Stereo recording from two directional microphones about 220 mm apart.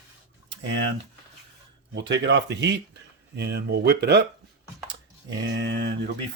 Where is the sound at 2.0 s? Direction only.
55° right (ahead or behind).